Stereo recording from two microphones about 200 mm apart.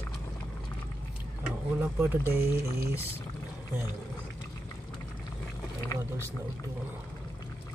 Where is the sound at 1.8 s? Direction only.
10° right (ahead or behind).